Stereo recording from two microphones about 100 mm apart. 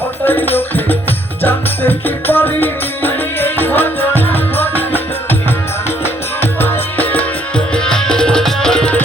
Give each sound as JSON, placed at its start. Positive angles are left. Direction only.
{"t": 0.3, "sound": "music", "side_deg": 20}
{"t": 6.4, "sound": "music", "side_deg": 20}